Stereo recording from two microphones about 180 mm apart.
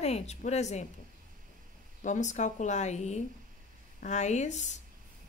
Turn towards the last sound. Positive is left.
turn(degrees=40)  # may be behind; listen again after turning